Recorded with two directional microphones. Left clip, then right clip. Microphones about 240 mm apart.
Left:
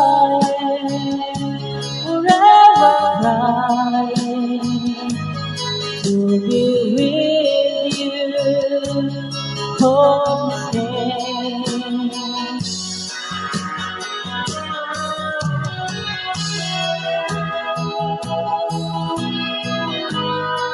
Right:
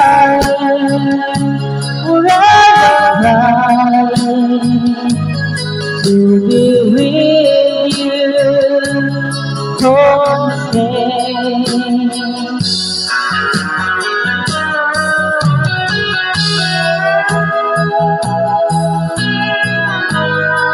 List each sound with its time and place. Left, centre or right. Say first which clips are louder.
0.1 s music: right 6 dB; right
6.0 s music: right 8 dB; right
17.9 s music: right 9 dB; right